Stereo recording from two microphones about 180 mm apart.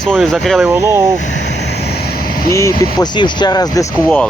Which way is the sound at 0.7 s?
15° right (ahead or behind).